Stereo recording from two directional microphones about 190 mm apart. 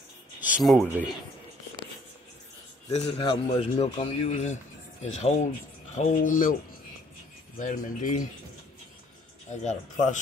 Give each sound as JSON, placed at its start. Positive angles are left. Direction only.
{"t": 0.4, "sound": "speech", "side_deg": -5}
{"t": 2.9, "sound": "a man's voice", "side_deg": 30}
{"t": 7.5, "sound": "speech", "side_deg": 45}
{"t": 9.5, "sound": "speech", "side_deg": 35}